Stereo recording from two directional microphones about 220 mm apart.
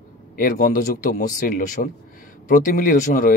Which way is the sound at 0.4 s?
40° left (ahead or behind).